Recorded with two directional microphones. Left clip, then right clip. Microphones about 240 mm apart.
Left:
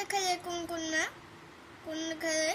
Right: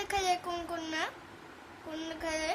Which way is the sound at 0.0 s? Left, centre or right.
Centre.